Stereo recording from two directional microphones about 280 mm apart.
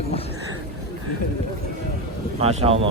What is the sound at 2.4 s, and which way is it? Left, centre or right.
Speech, right.